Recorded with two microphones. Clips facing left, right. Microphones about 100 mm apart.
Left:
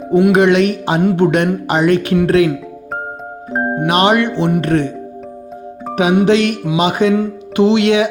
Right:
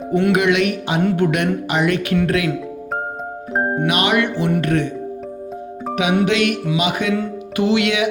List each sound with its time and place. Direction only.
0.3 s speech: 35° left (ahead or behind)
3.8 s speech: 35° left (ahead or behind)
5.9 s music: 35° left (ahead or behind)
6.2 s speech: 35° left (ahead or behind)